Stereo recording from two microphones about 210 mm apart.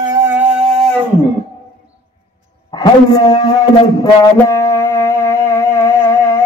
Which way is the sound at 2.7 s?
20° left (ahead or behind).